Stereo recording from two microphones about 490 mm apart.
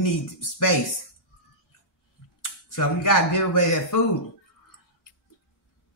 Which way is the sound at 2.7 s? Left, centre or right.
Left.